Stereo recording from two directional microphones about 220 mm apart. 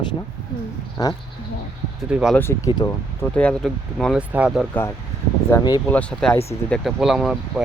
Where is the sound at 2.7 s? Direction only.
15° left (ahead or behind); by 4.6 s 5° right (ahead or behind).